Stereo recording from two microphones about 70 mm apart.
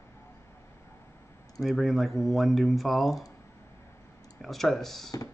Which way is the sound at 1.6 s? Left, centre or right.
Centre.